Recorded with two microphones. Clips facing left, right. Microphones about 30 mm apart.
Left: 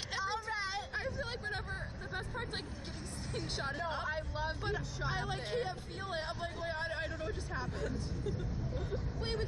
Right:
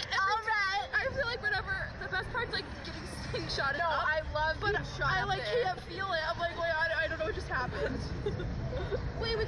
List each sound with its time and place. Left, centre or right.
0.1 s hubbub: right
3.3 s speech: right